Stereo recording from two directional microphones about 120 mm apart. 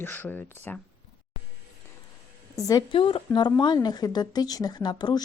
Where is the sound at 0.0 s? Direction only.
15° left (ahead or behind).